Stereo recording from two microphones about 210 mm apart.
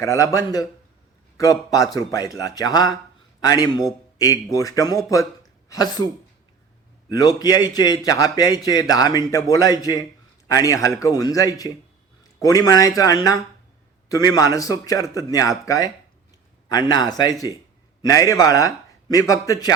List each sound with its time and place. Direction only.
0.0 s a man's voice: 15° left (ahead or behind)
7.1 s a man's voice: 15° left (ahead or behind)